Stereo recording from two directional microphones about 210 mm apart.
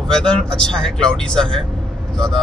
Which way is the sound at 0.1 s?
5° left (ahead or behind).